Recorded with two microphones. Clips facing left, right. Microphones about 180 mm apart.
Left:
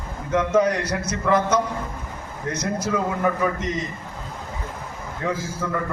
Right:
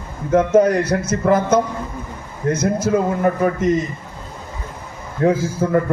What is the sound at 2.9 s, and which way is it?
Speech, 50° right (ahead or behind).